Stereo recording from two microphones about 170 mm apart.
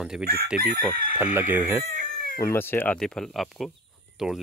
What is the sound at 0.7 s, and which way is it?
Chicken, 50° left (ahead or behind).